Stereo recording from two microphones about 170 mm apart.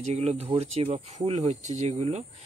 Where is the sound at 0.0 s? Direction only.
40° right (ahead or behind).